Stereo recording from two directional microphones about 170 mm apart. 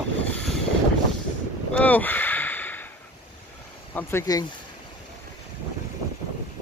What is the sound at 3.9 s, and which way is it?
Speech, 10° left (ahead or behind).